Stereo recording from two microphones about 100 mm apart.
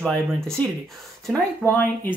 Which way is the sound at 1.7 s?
20° left (ahead or behind).